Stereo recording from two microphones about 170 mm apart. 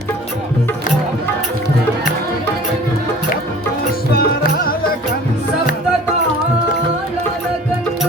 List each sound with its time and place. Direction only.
4.1 s music: 60° left (ahead or behind)